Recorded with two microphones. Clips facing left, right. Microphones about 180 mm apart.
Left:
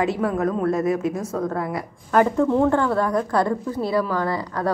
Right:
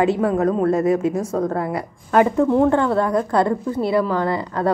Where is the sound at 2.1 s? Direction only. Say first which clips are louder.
Right 2 dB; 15° right (ahead or behind).